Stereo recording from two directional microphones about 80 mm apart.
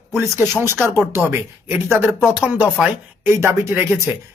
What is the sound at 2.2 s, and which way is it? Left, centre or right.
Speech, centre.